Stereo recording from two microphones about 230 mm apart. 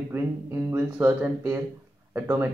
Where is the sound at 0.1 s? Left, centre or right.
Centre.